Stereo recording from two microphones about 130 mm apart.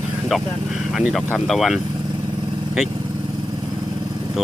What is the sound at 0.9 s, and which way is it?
Speech, centre (ahead or behind).